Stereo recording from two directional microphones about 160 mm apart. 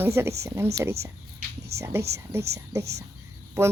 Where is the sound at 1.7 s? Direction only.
15° right (ahead or behind).